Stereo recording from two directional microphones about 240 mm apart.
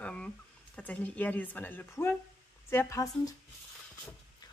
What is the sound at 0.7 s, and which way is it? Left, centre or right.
Speech, centre.